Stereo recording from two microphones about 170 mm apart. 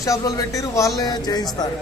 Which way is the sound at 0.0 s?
20° left (ahead or behind).